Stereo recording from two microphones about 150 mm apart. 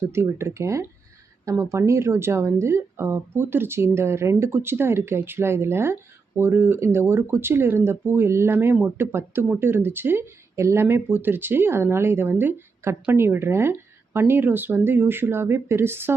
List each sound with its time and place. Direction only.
0.1 s speech: 15° right (ahead or behind)